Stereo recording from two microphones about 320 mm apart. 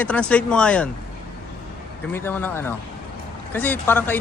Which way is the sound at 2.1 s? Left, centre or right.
Centre.